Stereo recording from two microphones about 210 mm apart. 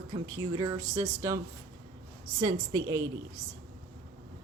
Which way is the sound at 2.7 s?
15° right (ahead or behind).